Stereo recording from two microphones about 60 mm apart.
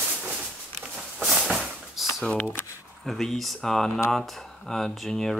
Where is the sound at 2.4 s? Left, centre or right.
Left.